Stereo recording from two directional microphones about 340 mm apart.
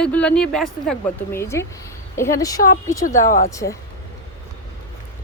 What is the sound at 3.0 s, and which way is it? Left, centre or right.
Speech, left.